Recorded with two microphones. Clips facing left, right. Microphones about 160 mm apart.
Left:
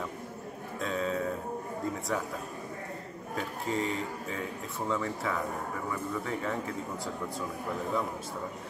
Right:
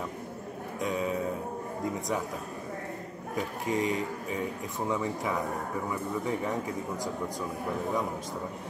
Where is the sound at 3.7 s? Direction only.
15° right (ahead or behind).